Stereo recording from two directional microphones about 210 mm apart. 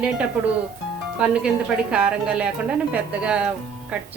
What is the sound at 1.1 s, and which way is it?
Speech, 5° right (ahead or behind).